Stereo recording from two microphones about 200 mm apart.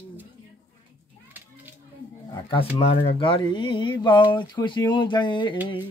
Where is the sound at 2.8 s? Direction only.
30° left (ahead or behind).